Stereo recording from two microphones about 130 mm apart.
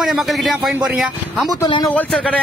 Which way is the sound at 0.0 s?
Centre (ahead or behind).